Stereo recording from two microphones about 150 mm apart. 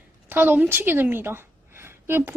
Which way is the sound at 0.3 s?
10° right (ahead or behind).